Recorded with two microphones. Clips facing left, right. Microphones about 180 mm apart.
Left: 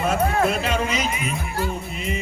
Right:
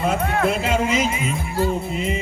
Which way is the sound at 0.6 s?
25° right (ahead or behind).